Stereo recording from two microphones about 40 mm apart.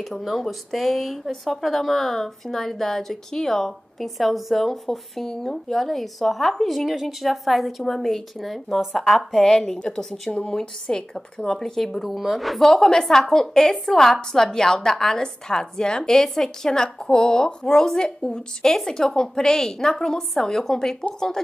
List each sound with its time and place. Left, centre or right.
0.2 s a woman's voice: centre
12.0 s speech: centre
12.6 s a woman's voice: centre